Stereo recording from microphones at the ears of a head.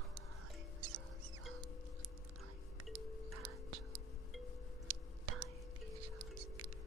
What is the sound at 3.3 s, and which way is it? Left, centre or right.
Whispering, right.